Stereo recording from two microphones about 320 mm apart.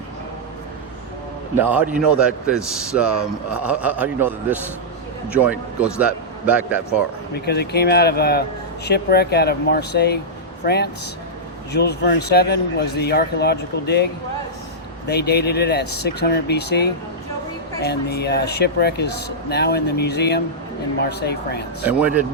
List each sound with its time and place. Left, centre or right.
1.5 s a man's voice: centre
7.3 s a man's voice: left
11.7 s a man's voice: left
21.8 s a man's voice: centre